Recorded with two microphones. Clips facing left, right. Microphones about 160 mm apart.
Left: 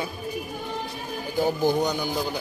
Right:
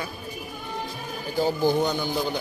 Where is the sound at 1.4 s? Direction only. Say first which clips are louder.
Even; 15° left (ahead or behind).